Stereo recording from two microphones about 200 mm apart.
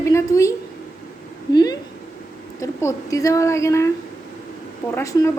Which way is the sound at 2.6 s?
15° left (ahead or behind).